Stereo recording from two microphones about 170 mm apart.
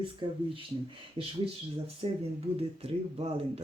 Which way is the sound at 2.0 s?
35° right (ahead or behind).